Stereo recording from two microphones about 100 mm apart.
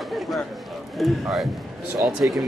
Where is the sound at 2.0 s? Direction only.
20° right (ahead or behind).